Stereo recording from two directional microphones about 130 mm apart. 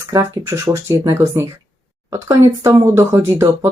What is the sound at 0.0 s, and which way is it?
Speech, 25° right (ahead or behind).